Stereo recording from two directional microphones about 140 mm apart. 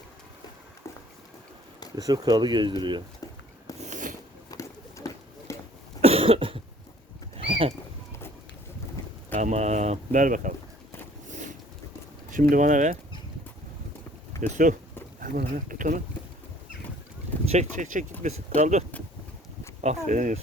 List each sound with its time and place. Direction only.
2.0 s speech: 25° right (ahead or behind)
3.8 s a sound: 60° right (ahead or behind)
4.5 s a sound: 20° left (ahead or behind)
6.0 s cough: 45° right (ahead or behind)
7.3 s horse: 40° right (ahead or behind)
9.3 s speech: 60° right (ahead or behind)
11.3 s boat: 60° right (ahead or behind)
12.3 s speech: 70° right (ahead or behind)
14.4 s speech: 60° right (ahead or behind)
15.2 s speech: 80° right
17.5 s speech: 60° right (ahead or behind)